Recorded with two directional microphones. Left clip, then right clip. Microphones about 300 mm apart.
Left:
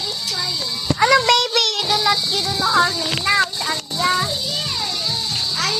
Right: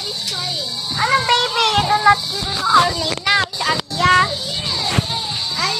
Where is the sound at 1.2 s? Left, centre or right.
Left.